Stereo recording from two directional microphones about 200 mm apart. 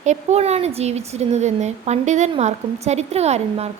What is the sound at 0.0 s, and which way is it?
Speech, 35° right (ahead or behind).